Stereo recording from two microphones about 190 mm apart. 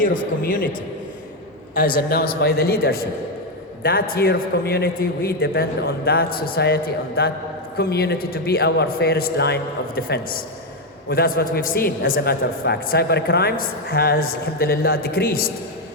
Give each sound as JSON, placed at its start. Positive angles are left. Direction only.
{"t": 0.0, "sound": "a man's voice", "side_deg": 45}
{"t": 2.0, "sound": "a man's voice", "side_deg": 55}